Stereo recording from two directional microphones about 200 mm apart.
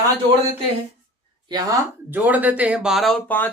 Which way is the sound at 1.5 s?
20° right (ahead or behind).